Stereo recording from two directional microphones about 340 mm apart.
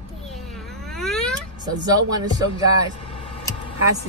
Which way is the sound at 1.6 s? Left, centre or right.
Centre.